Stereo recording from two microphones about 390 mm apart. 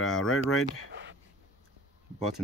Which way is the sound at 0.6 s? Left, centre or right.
Right.